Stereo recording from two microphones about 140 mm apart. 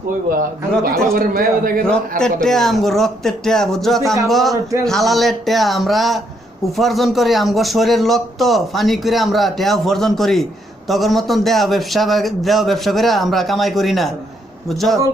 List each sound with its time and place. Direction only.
1.1 s a man's voice: 90° right
1.8 s a man's voice: 5° left (ahead or behind)